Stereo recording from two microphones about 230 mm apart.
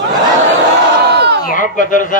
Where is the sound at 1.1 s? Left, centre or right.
Right.